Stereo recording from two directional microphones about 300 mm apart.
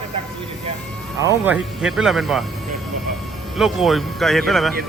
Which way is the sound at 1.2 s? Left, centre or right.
Centre.